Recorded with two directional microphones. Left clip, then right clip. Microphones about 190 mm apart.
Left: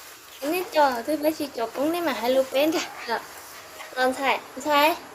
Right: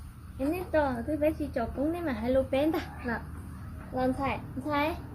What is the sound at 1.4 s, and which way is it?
A child's voice, 15° left (ahead or behind).